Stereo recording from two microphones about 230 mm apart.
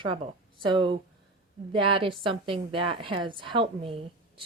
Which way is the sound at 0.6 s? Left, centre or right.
Right.